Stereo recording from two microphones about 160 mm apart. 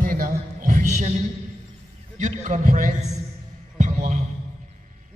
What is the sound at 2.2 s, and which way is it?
Speech, 50° right (ahead or behind).